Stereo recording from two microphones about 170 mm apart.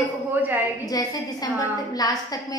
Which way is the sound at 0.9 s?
20° left (ahead or behind).